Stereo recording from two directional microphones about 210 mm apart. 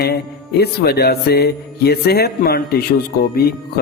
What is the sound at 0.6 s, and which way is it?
Speech, 50° left (ahead or behind).